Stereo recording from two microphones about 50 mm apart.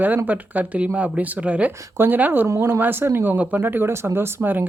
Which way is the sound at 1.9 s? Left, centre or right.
Right.